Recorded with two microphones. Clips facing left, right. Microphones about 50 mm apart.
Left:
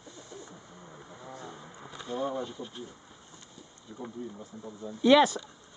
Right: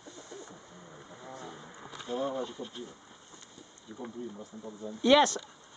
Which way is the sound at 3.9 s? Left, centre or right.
Right.